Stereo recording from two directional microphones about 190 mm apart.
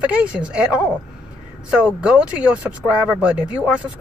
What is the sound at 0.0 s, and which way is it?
A woman's voice, 5° right (ahead or behind).